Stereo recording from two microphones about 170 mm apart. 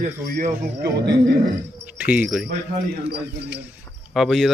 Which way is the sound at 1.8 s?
10° right (ahead or behind).